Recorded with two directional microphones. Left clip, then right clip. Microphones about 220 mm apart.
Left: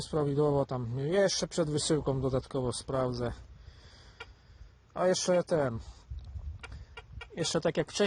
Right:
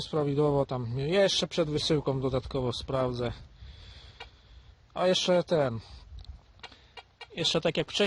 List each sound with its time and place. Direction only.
0.0 s a man's voice: 5° right (ahead or behind)
4.9 s a man's voice: 5° right (ahead or behind)
6.9 s chicken: 5° right (ahead or behind)